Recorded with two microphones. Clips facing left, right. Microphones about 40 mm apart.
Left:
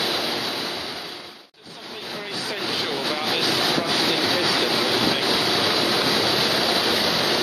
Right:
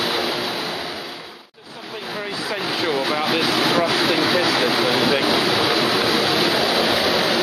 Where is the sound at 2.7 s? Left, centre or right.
Centre.